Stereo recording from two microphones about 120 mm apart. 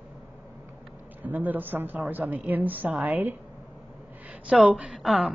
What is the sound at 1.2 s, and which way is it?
A woman's voice, 15° right (ahead or behind).